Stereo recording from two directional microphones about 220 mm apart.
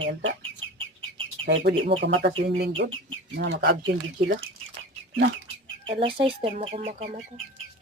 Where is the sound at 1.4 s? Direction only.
50° right (ahead or behind).